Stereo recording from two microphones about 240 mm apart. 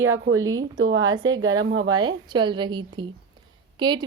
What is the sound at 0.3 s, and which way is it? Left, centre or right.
Speech, right.